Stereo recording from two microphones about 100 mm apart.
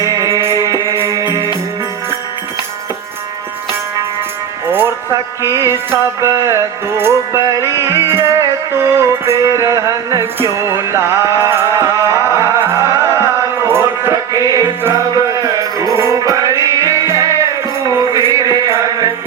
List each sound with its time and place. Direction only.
0.0 s music: 35° right (ahead or behind)
5.4 s music: 30° right (ahead or behind)
14.1 s music: 35° right (ahead or behind)
18.3 s chant: 35° right (ahead or behind)